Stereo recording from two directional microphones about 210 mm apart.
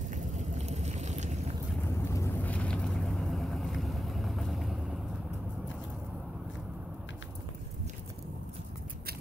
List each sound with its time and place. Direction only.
0.1 s boat: 35° right (ahead or behind)
1.9 s vehicle: 15° left (ahead or behind)